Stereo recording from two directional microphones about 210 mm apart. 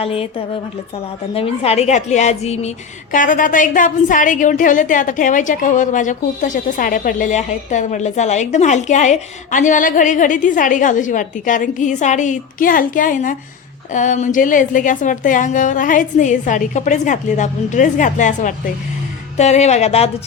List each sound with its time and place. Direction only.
0.0 s a woman's voice: 25° left (ahead or behind)